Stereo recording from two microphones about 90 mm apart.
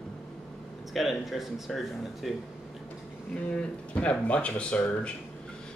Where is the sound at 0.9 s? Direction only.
Centre (ahead or behind).